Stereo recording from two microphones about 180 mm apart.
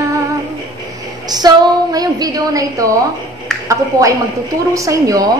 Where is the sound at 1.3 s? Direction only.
20° right (ahead or behind).